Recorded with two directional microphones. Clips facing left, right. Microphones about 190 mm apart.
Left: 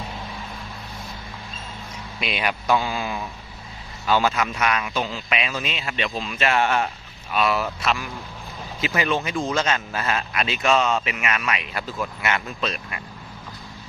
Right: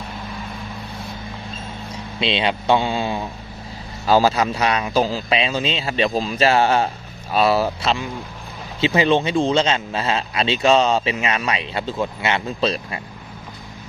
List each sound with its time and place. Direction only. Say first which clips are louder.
2.1 s a man's voice: right 5 dB; 25° right (ahead or behind)